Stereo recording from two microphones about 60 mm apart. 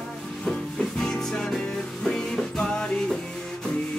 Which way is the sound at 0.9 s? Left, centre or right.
Centre.